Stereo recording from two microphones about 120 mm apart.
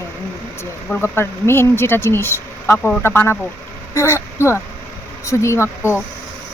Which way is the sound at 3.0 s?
20° left (ahead or behind).